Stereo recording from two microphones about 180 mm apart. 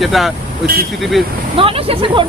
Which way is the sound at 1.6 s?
30° right (ahead or behind).